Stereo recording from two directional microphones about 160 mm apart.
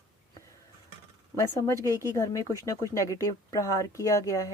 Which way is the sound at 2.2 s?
20° left (ahead or behind).